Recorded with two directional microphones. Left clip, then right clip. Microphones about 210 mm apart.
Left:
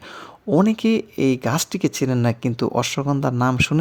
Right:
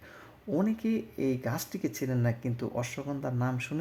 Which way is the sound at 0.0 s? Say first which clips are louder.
Left 13 dB; 35° left (ahead or behind).